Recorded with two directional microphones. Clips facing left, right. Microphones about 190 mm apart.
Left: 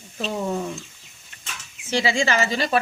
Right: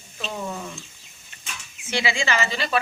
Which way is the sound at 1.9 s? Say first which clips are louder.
Left 3 dB; 40° left (ahead or behind).